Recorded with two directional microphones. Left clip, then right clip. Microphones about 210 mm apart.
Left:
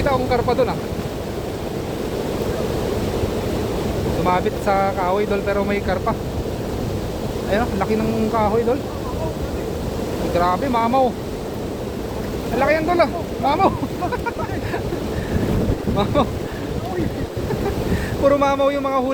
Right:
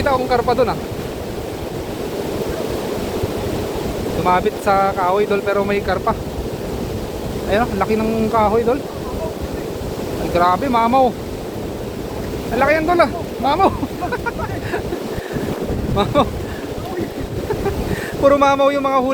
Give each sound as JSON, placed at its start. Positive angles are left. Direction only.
{"t": 0.0, "sound": "speech", "side_deg": -20}
{"t": 4.3, "sound": "speech", "side_deg": -20}
{"t": 7.5, "sound": "speech", "side_deg": -20}
{"t": 10.3, "sound": "speech", "side_deg": -25}
{"t": 12.5, "sound": "speech", "side_deg": -20}
{"t": 16.1, "sound": "speech", "side_deg": -25}
{"t": 18.2, "sound": "speech", "side_deg": -25}